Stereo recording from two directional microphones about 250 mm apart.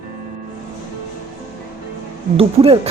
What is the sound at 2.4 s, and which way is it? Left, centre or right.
Speech, right.